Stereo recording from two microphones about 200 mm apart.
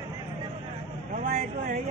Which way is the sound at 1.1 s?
40° right (ahead or behind).